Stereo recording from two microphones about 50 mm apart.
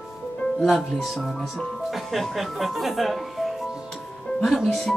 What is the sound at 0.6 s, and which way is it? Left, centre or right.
Speech, centre.